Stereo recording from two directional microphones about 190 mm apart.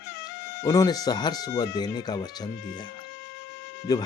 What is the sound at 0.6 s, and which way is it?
Speech, 20° left (ahead or behind).